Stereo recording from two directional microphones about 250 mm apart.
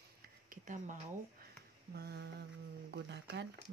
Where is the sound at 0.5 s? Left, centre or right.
Right.